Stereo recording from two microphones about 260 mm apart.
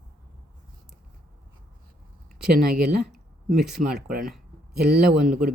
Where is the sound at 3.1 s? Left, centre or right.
Centre.